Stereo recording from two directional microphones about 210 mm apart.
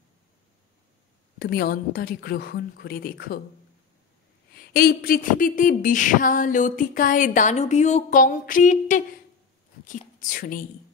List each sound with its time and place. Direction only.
1.4 s a woman's voice: 45° left (ahead or behind)
4.6 s a sound: 45° left (ahead or behind)
9.8 s speech: 40° left (ahead or behind)